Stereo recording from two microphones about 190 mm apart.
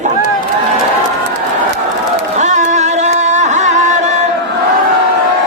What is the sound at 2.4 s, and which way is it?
Music, 40° right (ahead or behind).